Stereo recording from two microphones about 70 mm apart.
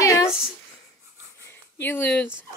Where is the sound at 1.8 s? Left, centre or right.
Left.